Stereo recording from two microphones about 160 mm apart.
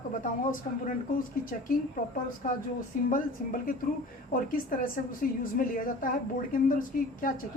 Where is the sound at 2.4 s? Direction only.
55° left (ahead or behind).